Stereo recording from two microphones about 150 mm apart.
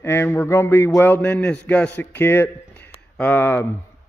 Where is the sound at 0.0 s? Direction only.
15° left (ahead or behind).